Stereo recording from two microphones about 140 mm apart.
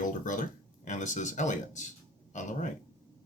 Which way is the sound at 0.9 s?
60° left (ahead or behind).